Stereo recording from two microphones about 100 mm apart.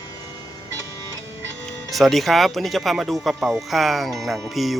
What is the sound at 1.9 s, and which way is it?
Speech, centre (ahead or behind).